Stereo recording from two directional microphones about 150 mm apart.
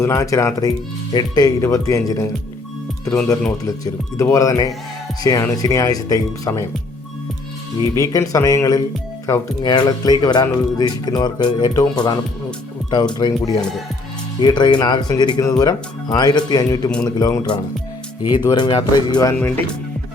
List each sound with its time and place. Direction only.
0.0 s speech: 20° left (ahead or behind)
3.6 s speech: 25° left (ahead or behind)
7.8 s speech: 20° left (ahead or behind)
13.1 s speech: 25° left (ahead or behind)
19.3 s speech: 15° left (ahead or behind)